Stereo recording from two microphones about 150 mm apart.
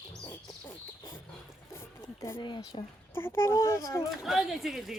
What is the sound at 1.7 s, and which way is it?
Music, 20° left (ahead or behind).